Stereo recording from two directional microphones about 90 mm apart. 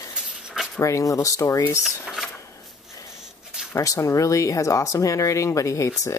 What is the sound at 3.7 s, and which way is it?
Speech, 35° left (ahead or behind).